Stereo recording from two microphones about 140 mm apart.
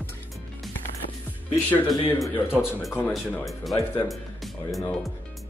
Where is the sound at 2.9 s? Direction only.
15° left (ahead or behind).